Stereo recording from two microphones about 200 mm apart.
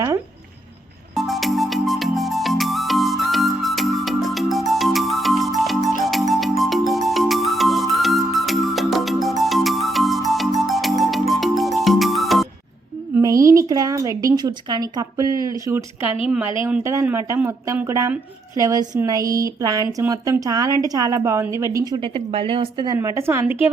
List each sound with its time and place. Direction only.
1.1 s music: centre (ahead or behind)
13.1 s a sound: 15° right (ahead or behind)
16.6 s speech: 15° right (ahead or behind)